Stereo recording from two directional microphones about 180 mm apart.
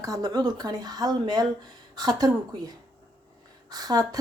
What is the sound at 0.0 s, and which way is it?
A woman's voice, 20° right (ahead or behind).